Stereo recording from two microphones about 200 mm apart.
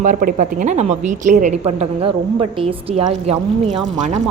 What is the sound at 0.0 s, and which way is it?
A woman's voice, 40° right (ahead or behind).